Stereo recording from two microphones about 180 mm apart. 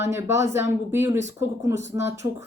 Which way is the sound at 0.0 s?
15° right (ahead or behind).